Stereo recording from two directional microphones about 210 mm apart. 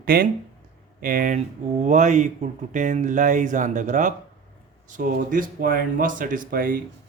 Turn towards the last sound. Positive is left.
turn(degrees=-40)  # may be behind; listen again after turning